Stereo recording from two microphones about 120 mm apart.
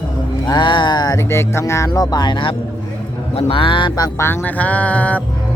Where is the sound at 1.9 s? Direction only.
35° left (ahead or behind).